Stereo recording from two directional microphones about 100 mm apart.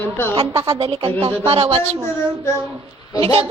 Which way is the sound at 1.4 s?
80° right.